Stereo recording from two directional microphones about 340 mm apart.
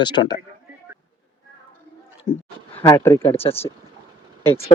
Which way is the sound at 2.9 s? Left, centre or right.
Centre.